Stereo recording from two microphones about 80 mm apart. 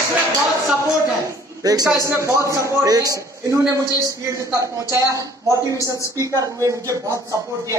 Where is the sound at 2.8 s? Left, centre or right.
Right.